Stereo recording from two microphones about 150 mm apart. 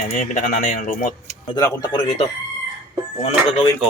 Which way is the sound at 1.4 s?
30° left (ahead or behind).